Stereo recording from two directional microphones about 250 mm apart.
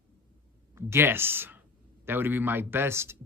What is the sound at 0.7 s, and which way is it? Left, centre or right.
Speech, centre.